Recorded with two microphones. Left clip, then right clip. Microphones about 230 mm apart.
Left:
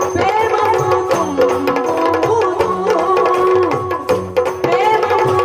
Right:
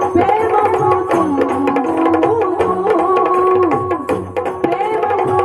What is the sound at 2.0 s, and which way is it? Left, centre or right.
Music, centre.